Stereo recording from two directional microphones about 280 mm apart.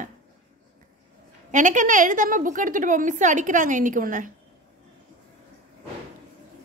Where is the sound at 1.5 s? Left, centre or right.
Right.